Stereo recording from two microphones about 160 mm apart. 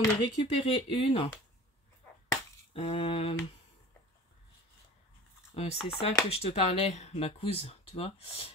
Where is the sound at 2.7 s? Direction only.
35° left (ahead or behind).